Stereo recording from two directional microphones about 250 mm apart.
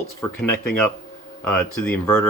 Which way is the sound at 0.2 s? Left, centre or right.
Centre.